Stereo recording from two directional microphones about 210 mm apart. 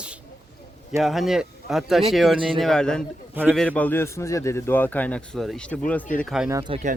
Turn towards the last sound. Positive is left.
turn(degrees=-20)  # may be behind; listen again after turning